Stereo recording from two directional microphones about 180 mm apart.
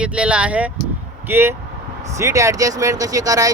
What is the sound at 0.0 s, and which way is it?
Speech, 5° right (ahead or behind).